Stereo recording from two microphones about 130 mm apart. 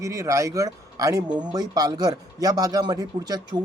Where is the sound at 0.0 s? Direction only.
25° right (ahead or behind).